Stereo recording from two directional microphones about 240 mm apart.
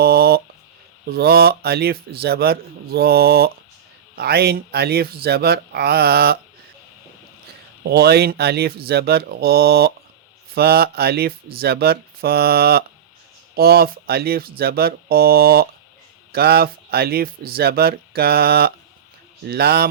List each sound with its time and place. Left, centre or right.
0.0 s a sound: right
1.1 s speech: right
7.9 s speech: right